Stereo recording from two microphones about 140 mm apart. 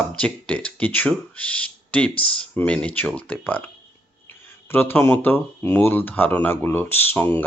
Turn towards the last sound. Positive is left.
turn(degrees=15)  # may be behind; listen again after turning